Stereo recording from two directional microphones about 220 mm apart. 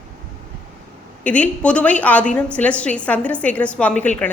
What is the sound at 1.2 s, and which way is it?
A woman's voice, 5° left (ahead or behind).